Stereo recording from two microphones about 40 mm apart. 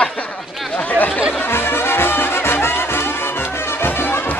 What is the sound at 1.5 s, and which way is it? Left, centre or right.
Music, left.